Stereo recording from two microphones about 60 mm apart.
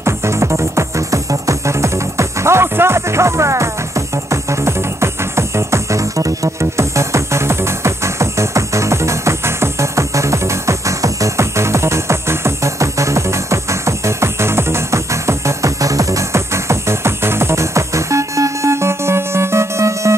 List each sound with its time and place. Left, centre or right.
0.0 s music: right